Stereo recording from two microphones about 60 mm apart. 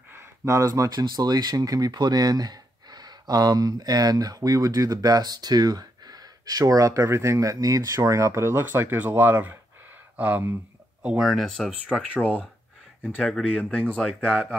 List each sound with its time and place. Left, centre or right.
0.4 s speech: right
0.7 s speech: right
8.6 s speech: right
11.1 s speech: centre
11.4 s speech: centre
11.9 s speech: left